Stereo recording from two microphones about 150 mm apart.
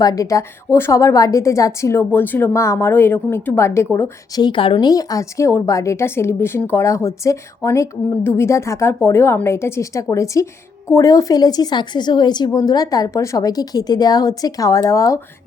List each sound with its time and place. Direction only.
0.0 s speech: 25° left (ahead or behind)
4.4 s speech: 35° left (ahead or behind)